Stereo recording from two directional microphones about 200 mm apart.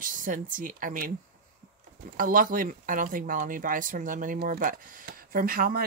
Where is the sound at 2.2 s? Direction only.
45° right (ahead or behind).